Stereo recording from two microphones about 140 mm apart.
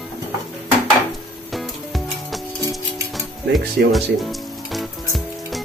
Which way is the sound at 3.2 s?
Centre (ahead or behind).